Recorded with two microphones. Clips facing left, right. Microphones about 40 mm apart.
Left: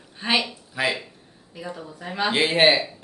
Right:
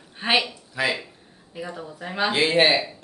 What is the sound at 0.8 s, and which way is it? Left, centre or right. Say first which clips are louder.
Speech: even; centre.